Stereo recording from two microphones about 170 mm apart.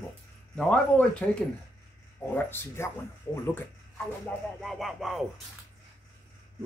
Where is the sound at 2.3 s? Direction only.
15° left (ahead or behind).